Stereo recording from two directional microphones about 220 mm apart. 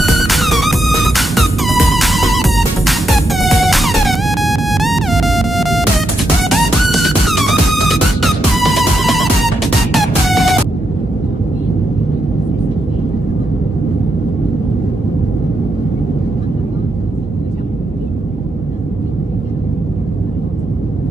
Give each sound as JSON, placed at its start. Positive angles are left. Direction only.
{"t": 0.0, "sound": "music", "side_deg": 0}